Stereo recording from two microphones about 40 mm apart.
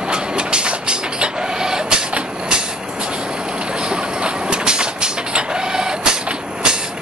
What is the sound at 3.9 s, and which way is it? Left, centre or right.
Vehicle, right.